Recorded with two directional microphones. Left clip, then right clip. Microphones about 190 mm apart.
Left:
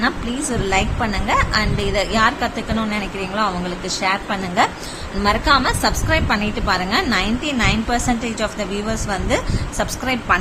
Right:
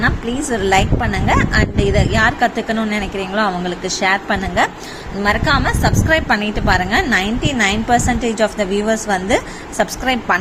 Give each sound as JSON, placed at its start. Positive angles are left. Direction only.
{"t": 0.6, "sound": "a woman's voice", "side_deg": -20}